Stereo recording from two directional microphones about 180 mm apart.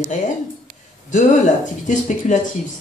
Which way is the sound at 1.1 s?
45° left (ahead or behind).